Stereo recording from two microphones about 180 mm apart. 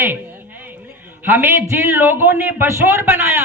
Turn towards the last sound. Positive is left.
turn(degrees=-10)  # may be behind; listen again after turning